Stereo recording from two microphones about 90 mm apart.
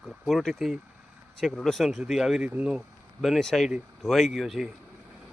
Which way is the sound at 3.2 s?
Centre (ahead or behind).